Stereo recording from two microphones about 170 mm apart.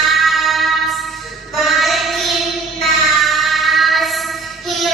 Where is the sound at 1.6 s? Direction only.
Centre (ahead or behind).